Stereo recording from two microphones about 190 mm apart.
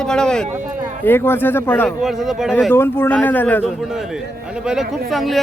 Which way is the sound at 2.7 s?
10° left (ahead or behind).